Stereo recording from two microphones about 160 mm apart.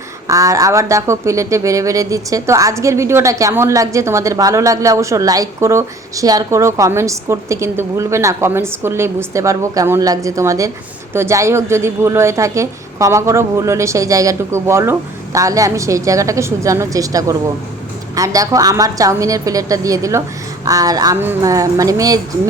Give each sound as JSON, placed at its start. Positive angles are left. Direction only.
{"t": 0.3, "sound": "speech", "side_deg": -20}